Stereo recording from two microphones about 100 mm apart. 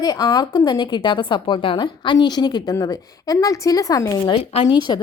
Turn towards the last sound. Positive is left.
turn(degrees=45)  # may be behind; listen again after turning